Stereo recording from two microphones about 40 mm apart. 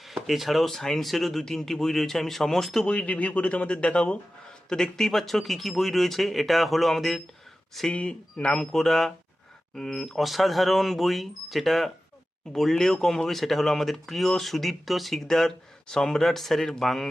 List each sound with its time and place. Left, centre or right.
0.0 s speech: centre
2.8 s speech: left
4.7 s speech: centre
7.9 s speech: left
8.7 s a man's voice: centre
15.3 s a man's voice: centre